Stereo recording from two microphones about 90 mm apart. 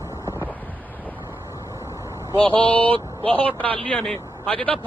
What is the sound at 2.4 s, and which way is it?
Speech, 70° right (ahead or behind).